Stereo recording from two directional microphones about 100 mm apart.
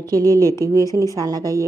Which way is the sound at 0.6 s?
35° right (ahead or behind).